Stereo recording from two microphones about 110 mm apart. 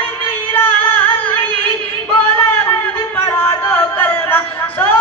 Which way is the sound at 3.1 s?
20° left (ahead or behind).